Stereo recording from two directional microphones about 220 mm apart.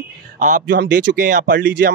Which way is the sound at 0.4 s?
40° right (ahead or behind).